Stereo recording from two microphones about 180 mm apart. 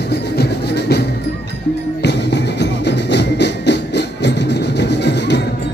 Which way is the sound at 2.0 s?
70° left (ahead or behind).